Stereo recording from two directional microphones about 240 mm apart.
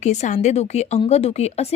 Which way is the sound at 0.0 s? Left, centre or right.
Left.